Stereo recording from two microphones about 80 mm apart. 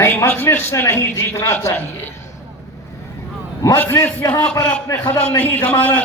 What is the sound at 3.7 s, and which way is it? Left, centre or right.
Speech, left.